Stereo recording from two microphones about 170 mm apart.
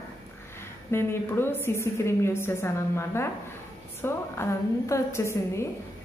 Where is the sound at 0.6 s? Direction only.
15° left (ahead or behind).